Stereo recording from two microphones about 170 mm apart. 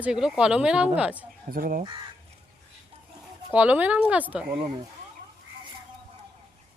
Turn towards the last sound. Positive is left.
turn(degrees=-25)  # may be behind; listen again after turning